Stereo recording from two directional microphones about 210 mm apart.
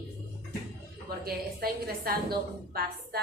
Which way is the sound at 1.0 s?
45° right (ahead or behind).